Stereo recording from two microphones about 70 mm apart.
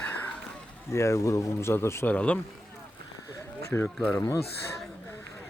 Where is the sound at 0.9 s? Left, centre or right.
Left.